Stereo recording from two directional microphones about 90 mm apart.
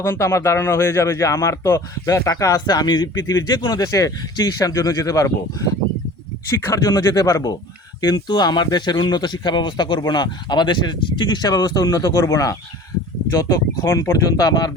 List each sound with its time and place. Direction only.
0.0 s speech: 30° left (ahead or behind)